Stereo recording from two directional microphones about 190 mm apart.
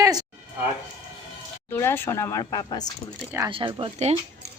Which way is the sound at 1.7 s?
10° left (ahead or behind).